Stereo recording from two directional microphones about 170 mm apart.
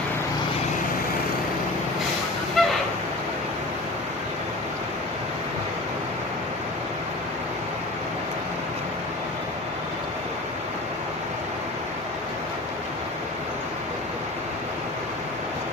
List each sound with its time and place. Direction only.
2.6 s honk: centre (ahead or behind)